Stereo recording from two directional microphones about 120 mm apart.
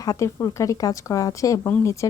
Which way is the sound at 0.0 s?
30° left (ahead or behind).